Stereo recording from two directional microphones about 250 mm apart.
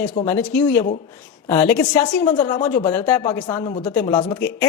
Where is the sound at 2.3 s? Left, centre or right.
Left.